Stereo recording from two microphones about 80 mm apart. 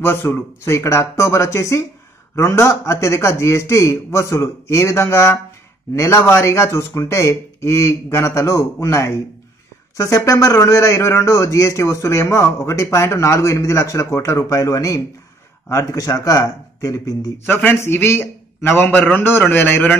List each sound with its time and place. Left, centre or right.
0.0 s a man's voice: left
17.5 s a man's voice: left